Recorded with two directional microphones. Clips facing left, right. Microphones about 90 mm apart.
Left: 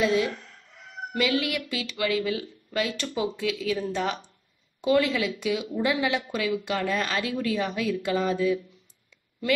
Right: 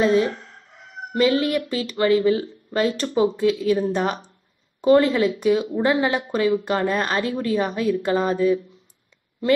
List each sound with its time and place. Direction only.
0.0 s speech: 40° right (ahead or behind)